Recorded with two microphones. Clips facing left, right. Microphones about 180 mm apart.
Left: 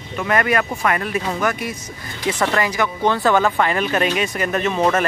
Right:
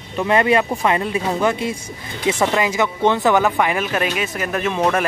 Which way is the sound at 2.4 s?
15° right (ahead or behind).